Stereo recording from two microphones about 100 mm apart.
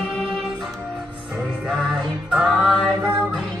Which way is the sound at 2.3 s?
5° right (ahead or behind).